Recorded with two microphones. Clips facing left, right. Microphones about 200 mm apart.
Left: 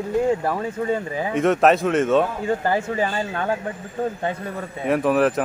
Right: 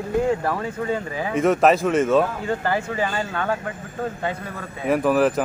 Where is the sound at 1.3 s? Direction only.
Centre (ahead or behind).